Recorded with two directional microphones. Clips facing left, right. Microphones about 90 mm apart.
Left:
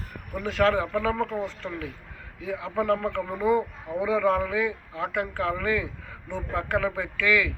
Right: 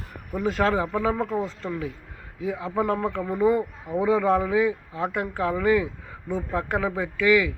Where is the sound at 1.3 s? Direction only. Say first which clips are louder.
Right 3 dB; 35° right (ahead or behind).